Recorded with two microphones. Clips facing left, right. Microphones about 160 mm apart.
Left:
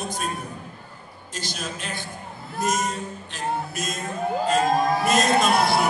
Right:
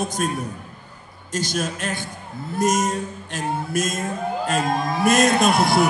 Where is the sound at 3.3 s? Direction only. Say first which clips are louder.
Right 4 dB; 45° right (ahead or behind).